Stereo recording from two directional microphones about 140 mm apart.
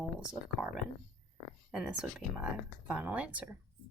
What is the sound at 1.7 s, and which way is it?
Speech, 5° right (ahead or behind).